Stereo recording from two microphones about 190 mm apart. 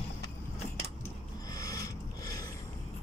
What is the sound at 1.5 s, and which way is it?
Filing, 20° left (ahead or behind).